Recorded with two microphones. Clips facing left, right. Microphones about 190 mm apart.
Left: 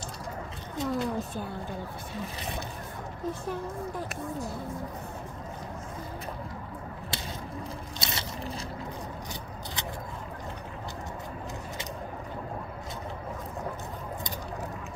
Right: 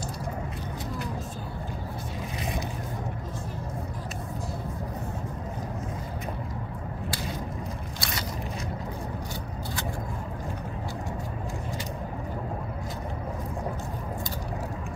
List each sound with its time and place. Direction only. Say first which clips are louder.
8.0 s scrape: right 1 dB; 25° left (ahead or behind)